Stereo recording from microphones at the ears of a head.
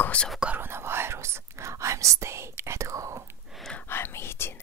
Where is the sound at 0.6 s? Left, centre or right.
Right.